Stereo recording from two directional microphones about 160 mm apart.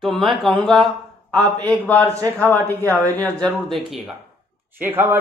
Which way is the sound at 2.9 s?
10° left (ahead or behind).